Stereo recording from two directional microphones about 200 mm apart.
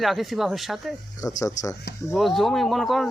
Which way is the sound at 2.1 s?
Centre (ahead or behind).